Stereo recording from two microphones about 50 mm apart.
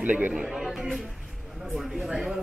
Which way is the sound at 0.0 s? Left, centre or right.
Right.